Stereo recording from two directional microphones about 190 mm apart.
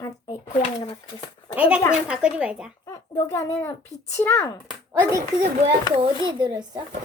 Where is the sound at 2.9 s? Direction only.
15° left (ahead or behind).